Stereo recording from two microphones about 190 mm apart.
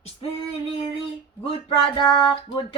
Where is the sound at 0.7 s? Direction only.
30° left (ahead or behind).